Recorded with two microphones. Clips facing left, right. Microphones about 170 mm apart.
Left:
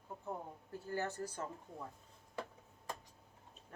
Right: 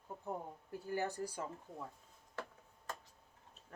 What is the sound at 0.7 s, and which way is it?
Speech, 15° right (ahead or behind).